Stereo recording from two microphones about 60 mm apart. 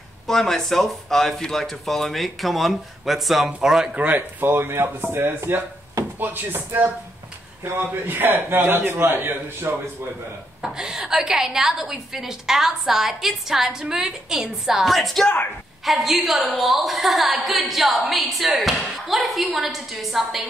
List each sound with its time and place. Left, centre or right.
0.3 s speech: centre
4.4 s a man's voice: right
10.6 s a woman's voice: centre